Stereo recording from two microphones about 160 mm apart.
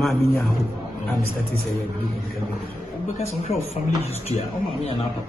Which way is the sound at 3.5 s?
40° left (ahead or behind).